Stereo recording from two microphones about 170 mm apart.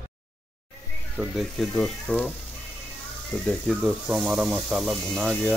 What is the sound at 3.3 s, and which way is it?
Speech, centre (ahead or behind).